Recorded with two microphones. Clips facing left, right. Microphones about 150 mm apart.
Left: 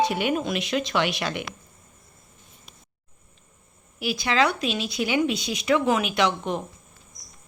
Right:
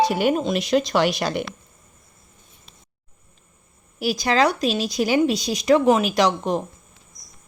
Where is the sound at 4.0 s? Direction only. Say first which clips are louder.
Right 4 dB; 40° right (ahead or behind).